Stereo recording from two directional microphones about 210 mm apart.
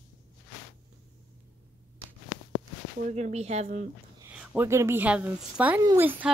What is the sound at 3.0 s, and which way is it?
Speech, 30° right (ahead or behind).